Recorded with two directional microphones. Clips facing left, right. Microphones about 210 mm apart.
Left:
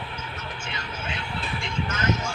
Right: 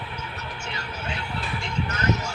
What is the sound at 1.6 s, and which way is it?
Vehicle, 40° right (ahead or behind).